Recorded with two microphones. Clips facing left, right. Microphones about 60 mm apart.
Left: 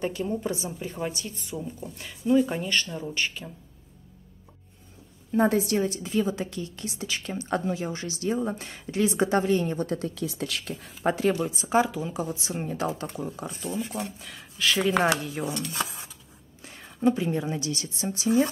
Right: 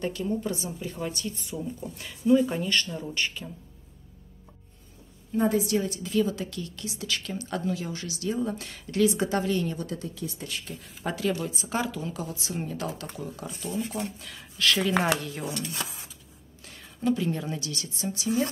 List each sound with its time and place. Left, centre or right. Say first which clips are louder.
0.0 s speech: left 1 dB; centre
5.3 s a woman's voice: left 2 dB; left
6.0 s speech: even; left
9.8 s a woman's voice: left 5 dB; left
10.1 s speech: left 4 dB; left
11.1 s speech: left 5 dB; left
11.6 s speech: left 9 dB; centre
13.7 s speech: right 1 dB; centre
16.6 s a sound: left 3 dB; left
17.5 s speech: left 3 dB; left